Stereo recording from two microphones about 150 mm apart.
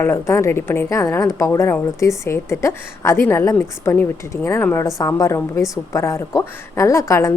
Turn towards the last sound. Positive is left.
turn(degrees=20)  # may be behind; listen again after turning